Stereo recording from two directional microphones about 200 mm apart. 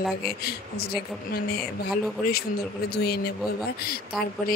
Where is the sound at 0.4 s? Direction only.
50° left (ahead or behind).